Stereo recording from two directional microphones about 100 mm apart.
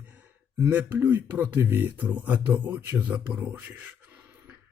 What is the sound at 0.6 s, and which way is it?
Speech, 20° right (ahead or behind).